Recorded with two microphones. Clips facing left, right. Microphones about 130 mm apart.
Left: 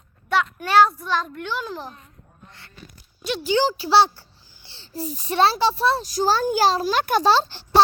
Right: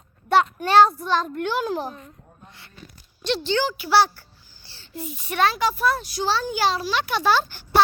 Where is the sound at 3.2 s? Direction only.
5° left (ahead or behind).